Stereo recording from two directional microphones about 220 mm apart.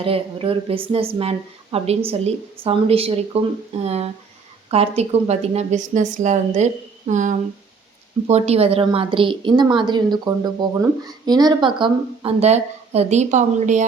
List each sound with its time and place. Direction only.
0.0 s a woman's voice: 25° right (ahead or behind)